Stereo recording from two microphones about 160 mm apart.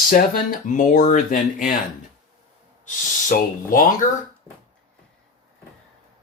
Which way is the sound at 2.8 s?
55° left (ahead or behind).